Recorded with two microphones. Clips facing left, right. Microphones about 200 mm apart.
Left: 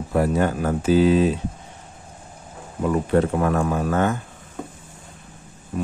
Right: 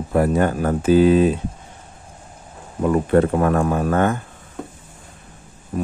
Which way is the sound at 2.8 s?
50° right (ahead or behind).